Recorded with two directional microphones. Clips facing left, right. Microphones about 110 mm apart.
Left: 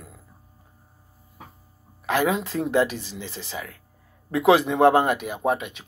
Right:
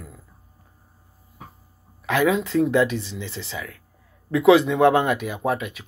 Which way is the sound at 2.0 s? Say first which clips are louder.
Right 2 dB; 35° left (ahead or behind).